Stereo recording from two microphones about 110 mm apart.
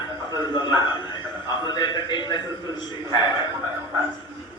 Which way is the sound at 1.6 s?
40° left (ahead or behind).